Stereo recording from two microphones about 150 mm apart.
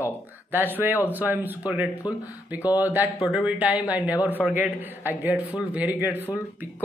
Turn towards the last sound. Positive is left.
turn(degrees=-10)  # may be behind; listen again after turning